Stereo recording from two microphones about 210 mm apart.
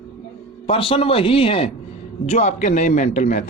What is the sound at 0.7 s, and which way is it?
A man's voice, 25° left (ahead or behind).